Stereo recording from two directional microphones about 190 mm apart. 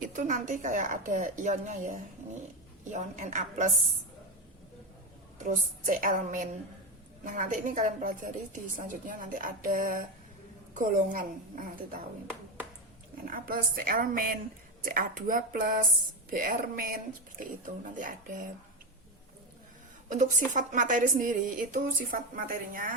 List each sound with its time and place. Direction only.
0.0 s a woman's voice: 40° right (ahead or behind)
5.4 s a woman's voice: 40° right (ahead or behind)
13.2 s a woman's voice: 50° right (ahead or behind)
20.1 s a woman's voice: 40° right (ahead or behind)